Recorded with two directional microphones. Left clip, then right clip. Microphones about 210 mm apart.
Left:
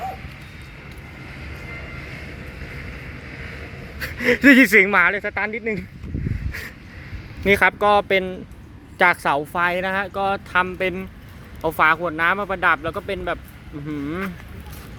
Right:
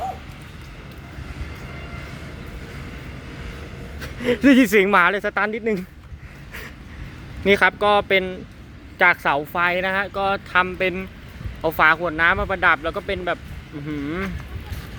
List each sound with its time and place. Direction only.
4.0 s speech: centre (ahead or behind); by 5.8 s 20° right (ahead or behind)
7.4 s speech: 5° left (ahead or behind)